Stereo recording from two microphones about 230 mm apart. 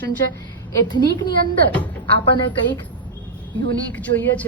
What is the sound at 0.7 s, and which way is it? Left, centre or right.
Speech, centre.